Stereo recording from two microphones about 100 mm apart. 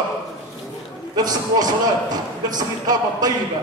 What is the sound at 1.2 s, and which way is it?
A man's voice, 40° right (ahead or behind).